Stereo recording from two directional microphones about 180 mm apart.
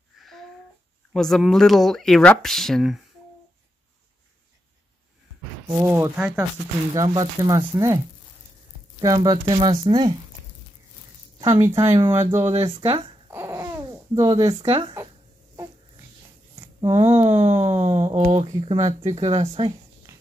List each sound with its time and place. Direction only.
0.2 s a sound: centre (ahead or behind)
1.1 s speech: centre (ahead or behind)
5.9 s speech: 10° right (ahead or behind)
6.9 s speech: 20° right (ahead or behind)
9.0 s speech: 20° right (ahead or behind)
11.6 s speech: 15° right (ahead or behind)
12.6 s speech: 30° right (ahead or behind)
13.3 s babbling: 15° right (ahead or behind)
14.6 s speech: 35° right (ahead or behind)
16.8 s speech: 35° right (ahead or behind)